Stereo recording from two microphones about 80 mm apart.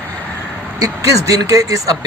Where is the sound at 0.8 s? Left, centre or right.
Right.